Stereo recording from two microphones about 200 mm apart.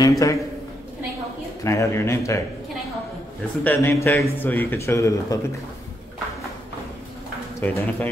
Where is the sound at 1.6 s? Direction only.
15° left (ahead or behind).